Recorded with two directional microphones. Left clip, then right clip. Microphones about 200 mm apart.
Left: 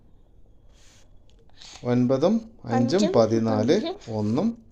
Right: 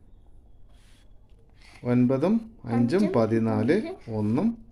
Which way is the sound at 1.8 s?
Centre (ahead or behind).